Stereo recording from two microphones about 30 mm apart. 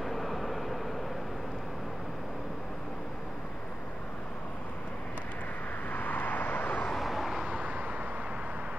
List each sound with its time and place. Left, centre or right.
0.0 s vehicle: centre
5.9 s vehicle: left
7.0 s vehicle: centre
7.4 s vehicle: right